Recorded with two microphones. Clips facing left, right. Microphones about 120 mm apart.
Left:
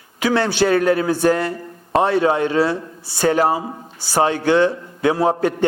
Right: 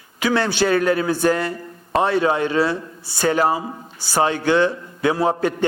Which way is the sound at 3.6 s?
30° left (ahead or behind).